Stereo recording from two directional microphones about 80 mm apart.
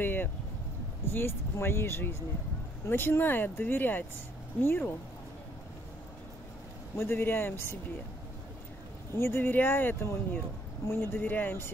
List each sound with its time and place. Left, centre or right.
0.0 s vehicle: left
1.1 s speech: left
7.0 s speech: left
9.1 s speech: left